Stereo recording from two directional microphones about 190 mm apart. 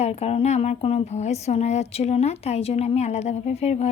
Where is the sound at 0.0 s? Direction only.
35° left (ahead or behind).